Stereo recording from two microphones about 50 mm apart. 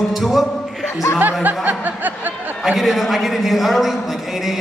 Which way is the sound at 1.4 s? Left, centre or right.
Right.